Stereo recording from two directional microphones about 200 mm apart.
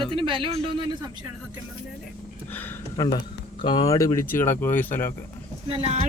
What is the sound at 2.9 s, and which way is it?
Speech, 20° left (ahead or behind).